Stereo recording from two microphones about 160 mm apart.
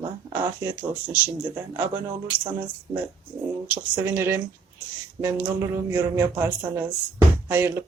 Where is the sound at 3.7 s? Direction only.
10° right (ahead or behind).